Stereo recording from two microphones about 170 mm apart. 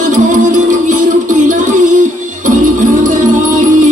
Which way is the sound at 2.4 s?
50° right (ahead or behind).